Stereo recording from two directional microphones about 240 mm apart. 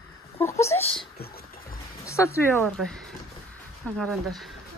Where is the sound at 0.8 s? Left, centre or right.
Left.